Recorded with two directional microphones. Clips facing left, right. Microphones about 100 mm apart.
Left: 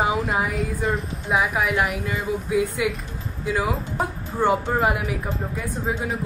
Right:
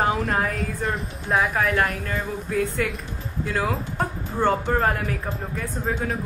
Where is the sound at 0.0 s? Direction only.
Centre (ahead or behind).